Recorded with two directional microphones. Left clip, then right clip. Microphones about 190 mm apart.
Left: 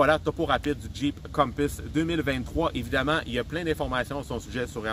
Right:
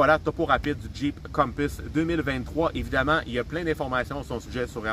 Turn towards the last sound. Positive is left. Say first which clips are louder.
# right 1 dB
turn(degrees=15)  # may be behind; listen again after turning